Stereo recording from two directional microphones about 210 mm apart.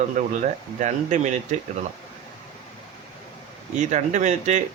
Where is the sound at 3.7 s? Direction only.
35° right (ahead or behind).